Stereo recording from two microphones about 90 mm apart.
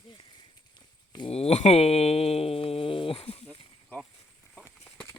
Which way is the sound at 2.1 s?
90° left.